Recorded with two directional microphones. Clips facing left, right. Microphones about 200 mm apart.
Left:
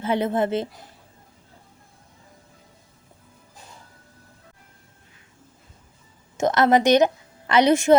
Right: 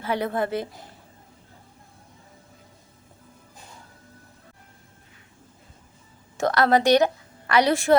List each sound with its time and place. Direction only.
0.0 s speech: 20° left (ahead or behind)
6.3 s a woman's voice: 20° left (ahead or behind)